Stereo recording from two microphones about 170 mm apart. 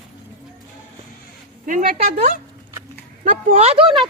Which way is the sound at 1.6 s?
55° right (ahead or behind).